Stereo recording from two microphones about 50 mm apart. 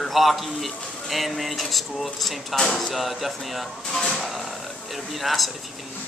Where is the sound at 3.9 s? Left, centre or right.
Centre.